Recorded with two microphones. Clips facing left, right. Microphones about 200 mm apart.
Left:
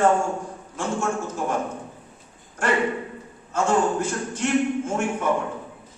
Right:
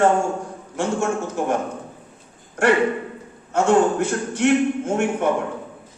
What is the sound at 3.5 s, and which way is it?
A man's voice, 70° right (ahead or behind).